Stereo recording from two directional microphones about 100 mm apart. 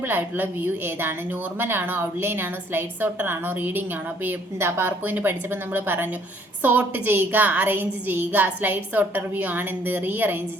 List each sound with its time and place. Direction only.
0.0 s a woman's voice: 20° right (ahead or behind)